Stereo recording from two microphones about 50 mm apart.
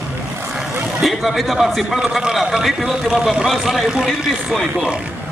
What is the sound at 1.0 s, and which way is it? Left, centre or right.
Speech, centre.